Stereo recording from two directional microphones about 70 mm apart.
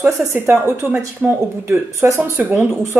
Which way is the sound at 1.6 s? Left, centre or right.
Right.